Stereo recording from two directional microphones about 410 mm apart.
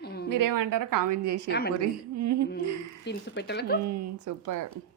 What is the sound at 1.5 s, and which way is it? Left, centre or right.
Speech, left.